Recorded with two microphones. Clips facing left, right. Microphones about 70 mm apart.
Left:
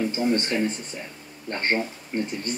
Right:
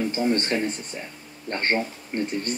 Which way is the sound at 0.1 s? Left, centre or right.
Right.